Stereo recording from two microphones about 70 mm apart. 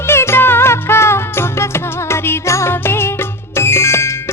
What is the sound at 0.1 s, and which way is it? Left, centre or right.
Music, left.